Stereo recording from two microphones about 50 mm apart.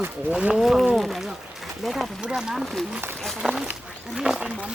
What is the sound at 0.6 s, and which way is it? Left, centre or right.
Speech, centre.